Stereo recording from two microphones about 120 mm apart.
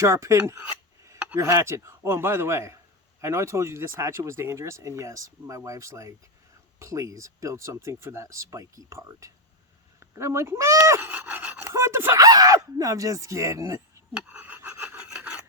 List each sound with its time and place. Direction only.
0.0 s speech: 25° right (ahead or behind)
11.7 s a sound: 20° right (ahead or behind)
12.2 s speech: 30° right (ahead or behind)
14.1 s filing: 10° right (ahead or behind)